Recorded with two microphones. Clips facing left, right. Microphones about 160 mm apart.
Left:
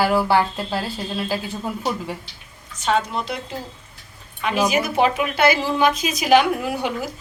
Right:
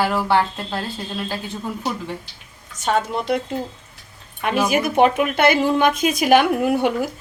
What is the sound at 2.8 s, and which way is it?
Speech, 50° right (ahead or behind).